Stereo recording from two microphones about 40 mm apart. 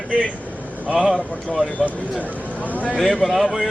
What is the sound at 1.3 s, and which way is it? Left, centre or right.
A man's voice, left.